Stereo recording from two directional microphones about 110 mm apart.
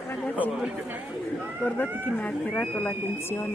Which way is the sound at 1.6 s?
15° left (ahead or behind).